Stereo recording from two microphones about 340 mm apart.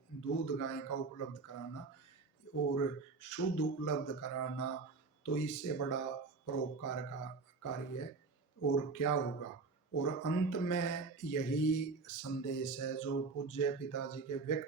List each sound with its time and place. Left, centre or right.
0.2 s speech: left